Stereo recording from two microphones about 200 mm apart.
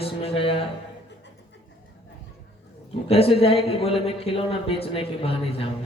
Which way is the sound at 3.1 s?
30° left (ahead or behind).